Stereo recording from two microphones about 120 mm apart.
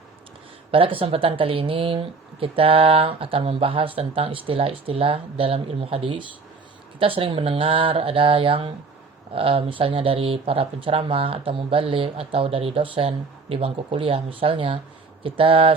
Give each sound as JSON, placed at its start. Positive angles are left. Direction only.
{"t": 0.7, "sound": "speech", "side_deg": -50}